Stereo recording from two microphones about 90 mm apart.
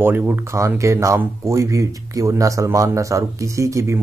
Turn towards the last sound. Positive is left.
turn(degrees=-35)  # may be behind; listen again after turning